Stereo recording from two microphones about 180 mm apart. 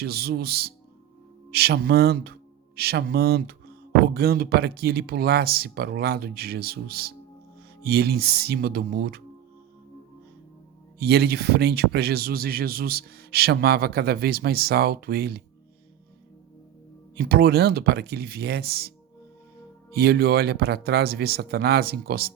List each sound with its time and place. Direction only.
0.0 s speech: 60° right (ahead or behind)
11.0 s speech: 65° right (ahead or behind)
17.2 s speech: 60° right (ahead or behind)